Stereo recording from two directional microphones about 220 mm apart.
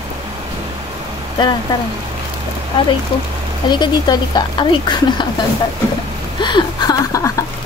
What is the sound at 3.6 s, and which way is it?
Speech, 20° left (ahead or behind).